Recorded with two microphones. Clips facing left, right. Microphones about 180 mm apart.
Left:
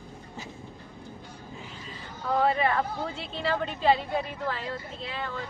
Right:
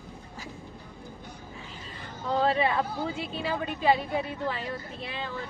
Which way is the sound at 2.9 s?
5° right (ahead or behind).